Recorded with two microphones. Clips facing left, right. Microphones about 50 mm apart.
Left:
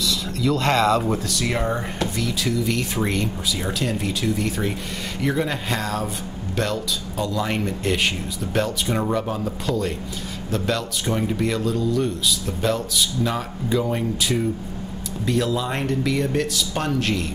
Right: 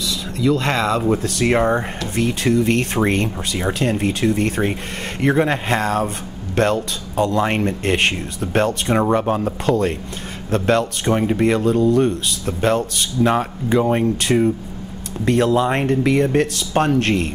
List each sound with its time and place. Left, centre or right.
0.1 s a sound: right
0.7 s speech: right
1.2 s speech: right
3.5 s speech: right
8.9 s speech: right
15.2 s speech: right